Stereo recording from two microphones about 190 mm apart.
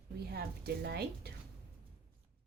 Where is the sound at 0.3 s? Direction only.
55° right (ahead or behind).